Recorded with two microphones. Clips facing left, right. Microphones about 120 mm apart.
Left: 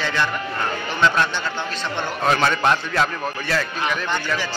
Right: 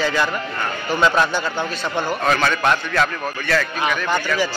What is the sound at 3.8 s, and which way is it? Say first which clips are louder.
Speech: right 3 dB; 10° right (ahead or behind).